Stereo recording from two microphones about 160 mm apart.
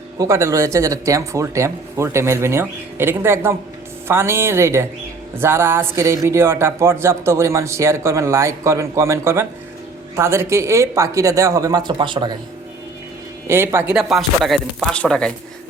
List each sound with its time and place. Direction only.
0.2 s speech: 20° right (ahead or behind)
13.5 s speech: 15° right (ahead or behind)
13.9 s speech: centre (ahead or behind)